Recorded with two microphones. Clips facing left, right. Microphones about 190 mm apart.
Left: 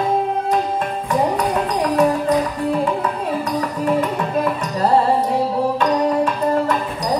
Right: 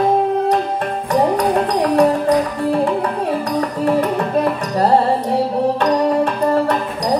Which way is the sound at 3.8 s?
40° right (ahead or behind).